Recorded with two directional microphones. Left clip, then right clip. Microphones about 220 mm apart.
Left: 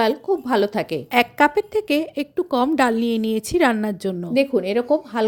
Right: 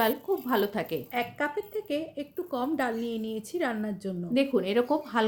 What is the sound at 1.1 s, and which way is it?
Speech, 50° left (ahead or behind).